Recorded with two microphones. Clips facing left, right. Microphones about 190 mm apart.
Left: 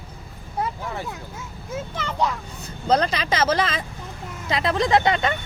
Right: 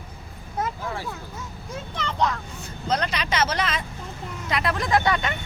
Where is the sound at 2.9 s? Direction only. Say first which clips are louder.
Left 5 dB; 30° left (ahead or behind).